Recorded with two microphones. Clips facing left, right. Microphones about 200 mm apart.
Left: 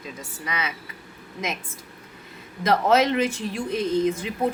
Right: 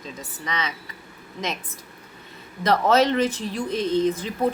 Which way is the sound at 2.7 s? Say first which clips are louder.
Right 1 dB; 10° left (ahead or behind).